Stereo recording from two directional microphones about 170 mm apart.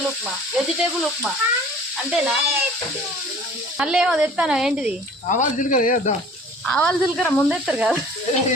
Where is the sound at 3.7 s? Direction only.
5° right (ahead or behind).